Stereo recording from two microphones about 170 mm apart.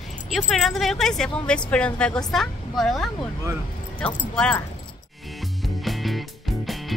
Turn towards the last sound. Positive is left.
turn(degrees=0)  # may be behind; listen again after turning